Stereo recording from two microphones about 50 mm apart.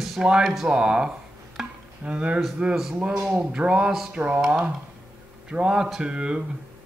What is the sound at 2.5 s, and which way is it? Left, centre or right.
Speech, centre.